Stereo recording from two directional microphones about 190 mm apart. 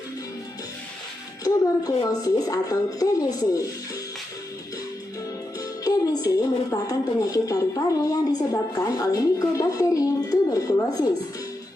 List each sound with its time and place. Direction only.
1.5 s a woman's voice: 20° left (ahead or behind)
5.5 s a woman's voice: 20° left (ahead or behind)